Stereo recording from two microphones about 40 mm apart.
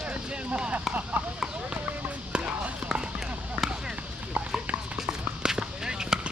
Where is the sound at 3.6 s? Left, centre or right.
Right.